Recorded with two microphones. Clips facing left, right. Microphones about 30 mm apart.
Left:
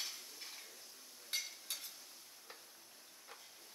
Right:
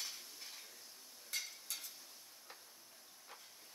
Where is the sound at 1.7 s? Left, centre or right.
Left.